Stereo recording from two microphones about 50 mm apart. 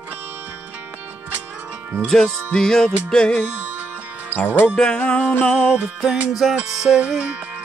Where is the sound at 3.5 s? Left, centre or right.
Right.